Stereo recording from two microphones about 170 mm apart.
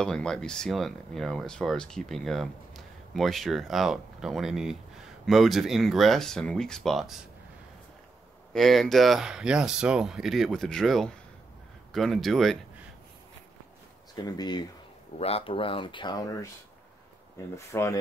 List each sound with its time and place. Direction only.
0.0 s speech: 5° left (ahead or behind)
8.5 s speech: centre (ahead or behind)
14.1 s speech: 25° left (ahead or behind)
15.1 s speech: 35° left (ahead or behind); by 16.4 s 20° left (ahead or behind)
17.6 s speech: 15° left (ahead or behind)